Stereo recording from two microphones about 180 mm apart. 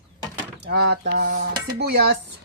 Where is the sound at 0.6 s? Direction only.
65° right (ahead or behind).